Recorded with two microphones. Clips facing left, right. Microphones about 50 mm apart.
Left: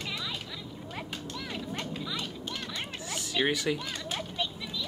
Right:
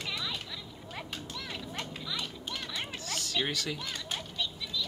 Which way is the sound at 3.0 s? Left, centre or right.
Centre.